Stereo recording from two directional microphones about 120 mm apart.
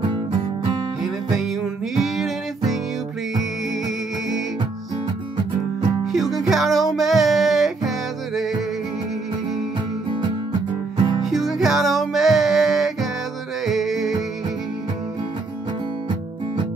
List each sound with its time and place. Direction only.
0.1 s music: 40° right (ahead or behind)
1.0 s music: centre (ahead or behind)
6.1 s music: centre (ahead or behind)
11.2 s music: centre (ahead or behind)